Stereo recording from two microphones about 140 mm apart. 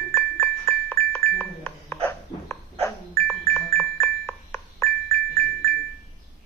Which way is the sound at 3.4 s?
20° left (ahead or behind).